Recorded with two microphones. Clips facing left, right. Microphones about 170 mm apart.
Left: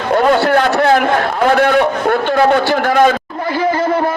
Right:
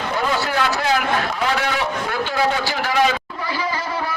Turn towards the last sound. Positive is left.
turn(degrees=50)  # may be behind; listen again after turning